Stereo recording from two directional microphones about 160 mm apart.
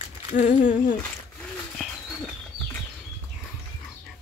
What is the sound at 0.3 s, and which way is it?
Speech, 50° left (ahead or behind).